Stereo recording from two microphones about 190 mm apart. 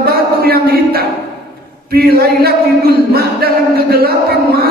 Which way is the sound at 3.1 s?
55° right (ahead or behind).